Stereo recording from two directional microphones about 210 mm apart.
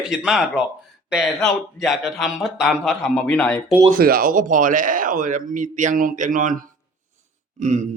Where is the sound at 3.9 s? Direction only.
45° right (ahead or behind).